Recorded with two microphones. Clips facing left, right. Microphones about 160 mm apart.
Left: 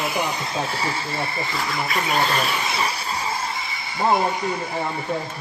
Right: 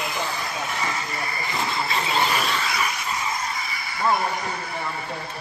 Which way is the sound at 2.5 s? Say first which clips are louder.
Left 1 dB; 25° left (ahead or behind).